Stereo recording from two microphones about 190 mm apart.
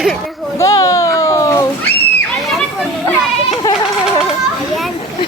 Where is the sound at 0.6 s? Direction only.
15° left (ahead or behind).